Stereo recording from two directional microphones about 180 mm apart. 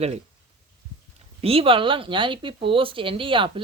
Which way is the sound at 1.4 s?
30° right (ahead or behind).